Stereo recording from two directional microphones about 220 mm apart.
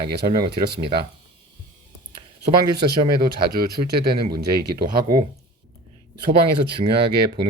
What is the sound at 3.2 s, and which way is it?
Speech, 45° right (ahead or behind).